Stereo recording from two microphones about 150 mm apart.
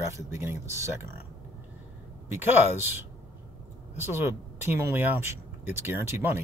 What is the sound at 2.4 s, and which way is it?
Speech, 15° right (ahead or behind).